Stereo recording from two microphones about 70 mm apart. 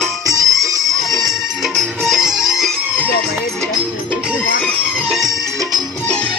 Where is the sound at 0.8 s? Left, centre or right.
Centre.